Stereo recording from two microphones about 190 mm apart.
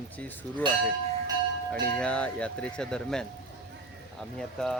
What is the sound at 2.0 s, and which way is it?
Speech, 5° left (ahead or behind).